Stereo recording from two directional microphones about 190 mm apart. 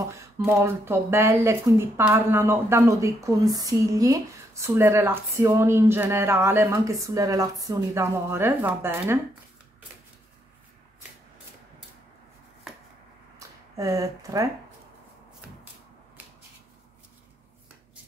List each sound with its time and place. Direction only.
0.0 s a woman's voice: 15° right (ahead or behind)
13.7 s a woman's voice: 15° right (ahead or behind)